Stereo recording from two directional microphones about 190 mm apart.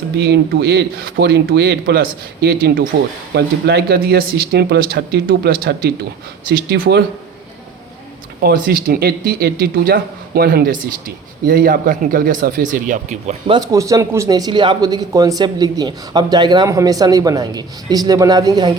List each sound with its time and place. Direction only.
0.2 s speech: 60° right (ahead or behind)
8.4 s speech: 50° right (ahead or behind)
13.5 s speech: 20° right (ahead or behind)